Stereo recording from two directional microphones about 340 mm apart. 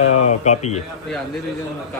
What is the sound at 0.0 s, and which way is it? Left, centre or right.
Speech, centre.